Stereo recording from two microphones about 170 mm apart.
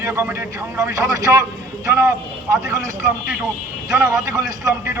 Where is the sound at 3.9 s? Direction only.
15° right (ahead or behind).